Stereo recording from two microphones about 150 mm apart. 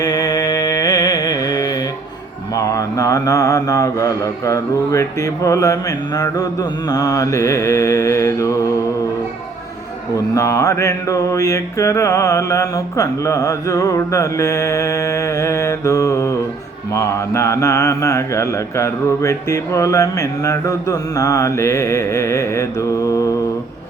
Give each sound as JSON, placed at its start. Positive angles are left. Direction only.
{"t": 0.0, "sound": "music", "side_deg": 25}
{"t": 2.6, "sound": "mantra", "side_deg": 20}
{"t": 10.3, "sound": "mantra", "side_deg": 20}